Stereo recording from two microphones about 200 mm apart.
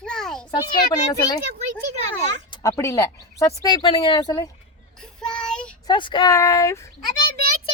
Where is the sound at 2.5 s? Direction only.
15° left (ahead or behind).